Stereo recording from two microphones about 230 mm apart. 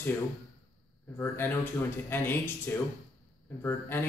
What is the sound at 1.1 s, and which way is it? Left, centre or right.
A man's voice, centre.